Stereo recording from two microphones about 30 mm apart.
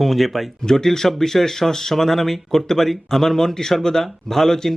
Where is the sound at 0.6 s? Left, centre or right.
Centre.